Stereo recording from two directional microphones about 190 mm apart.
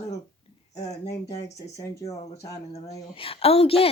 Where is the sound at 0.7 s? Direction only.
35° left (ahead or behind).